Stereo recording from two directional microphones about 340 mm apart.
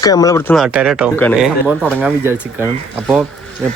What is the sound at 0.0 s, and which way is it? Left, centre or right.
Speech, centre.